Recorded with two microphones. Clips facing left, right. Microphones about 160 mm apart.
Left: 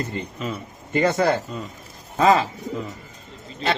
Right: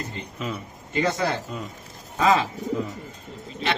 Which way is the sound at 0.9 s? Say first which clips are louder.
Left 5 dB; 50° left (ahead or behind).